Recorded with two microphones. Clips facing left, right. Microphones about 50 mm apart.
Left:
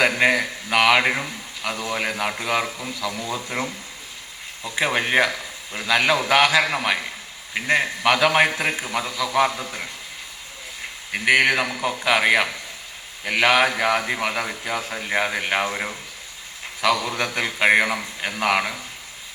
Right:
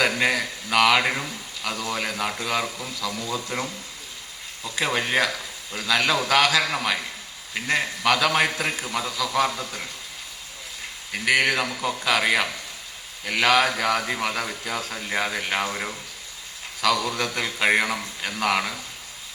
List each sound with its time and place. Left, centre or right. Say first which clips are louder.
0.0 s a man's voice: left 3 dB; left
11.1 s a man's voice: left 3 dB; left